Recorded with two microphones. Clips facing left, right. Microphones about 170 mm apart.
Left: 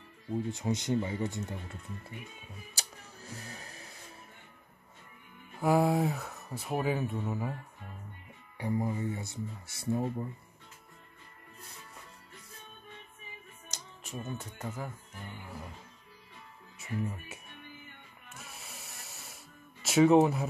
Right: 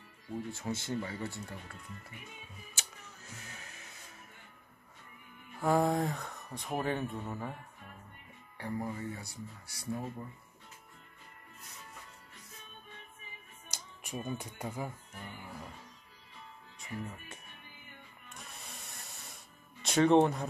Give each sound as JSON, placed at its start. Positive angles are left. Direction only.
{"t": 0.3, "sound": "speech", "side_deg": 20}
{"t": 2.7, "sound": "music", "side_deg": 35}
{"t": 5.6, "sound": "speech", "side_deg": 10}
{"t": 8.5, "sound": "speech", "side_deg": 15}
{"t": 13.7, "sound": "speech", "side_deg": -10}
{"t": 16.7, "sound": "speech", "side_deg": 5}
{"t": 18.3, "sound": "music", "side_deg": 5}